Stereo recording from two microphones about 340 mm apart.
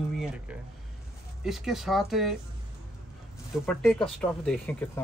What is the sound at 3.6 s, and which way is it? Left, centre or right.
Speech, centre.